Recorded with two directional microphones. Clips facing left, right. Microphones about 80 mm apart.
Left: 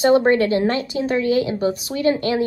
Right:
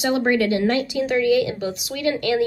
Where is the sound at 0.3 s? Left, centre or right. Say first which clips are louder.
Left 2 dB; left.